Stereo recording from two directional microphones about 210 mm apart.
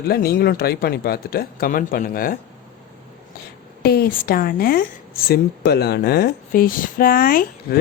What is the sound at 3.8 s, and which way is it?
A woman's voice, 50° left (ahead or behind).